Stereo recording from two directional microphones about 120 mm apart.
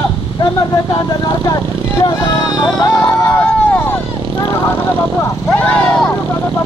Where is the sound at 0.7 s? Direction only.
35° left (ahead or behind).